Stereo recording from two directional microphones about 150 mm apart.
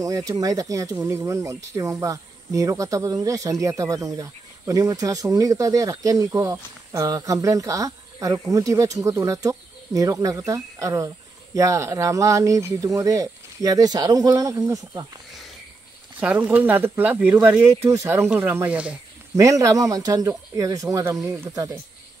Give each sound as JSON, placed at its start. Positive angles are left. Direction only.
{"t": 0.0, "sound": "speech", "side_deg": -20}
{"t": 16.2, "sound": "speech", "side_deg": -10}
{"t": 19.3, "sound": "speech", "side_deg": -20}